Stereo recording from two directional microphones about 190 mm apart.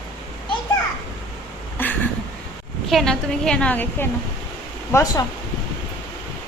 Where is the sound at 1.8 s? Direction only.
10° left (ahead or behind).